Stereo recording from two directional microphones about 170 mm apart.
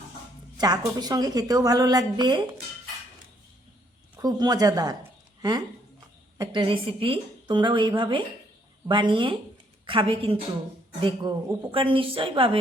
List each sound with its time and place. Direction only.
0.5 s a woman's voice: 25° right (ahead or behind)
4.2 s a woman's voice: 25° right (ahead or behind)